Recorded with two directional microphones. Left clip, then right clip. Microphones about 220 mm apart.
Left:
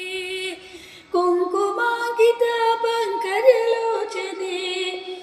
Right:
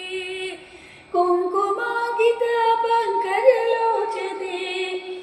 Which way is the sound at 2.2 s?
50° left (ahead or behind).